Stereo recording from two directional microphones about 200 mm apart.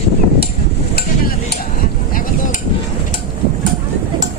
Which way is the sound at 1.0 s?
50° left (ahead or behind).